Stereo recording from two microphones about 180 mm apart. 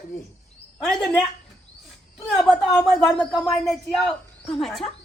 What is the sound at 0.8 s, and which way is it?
Speech, 5° left (ahead or behind).